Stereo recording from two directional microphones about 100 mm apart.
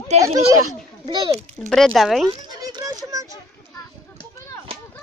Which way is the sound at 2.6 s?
40° right (ahead or behind).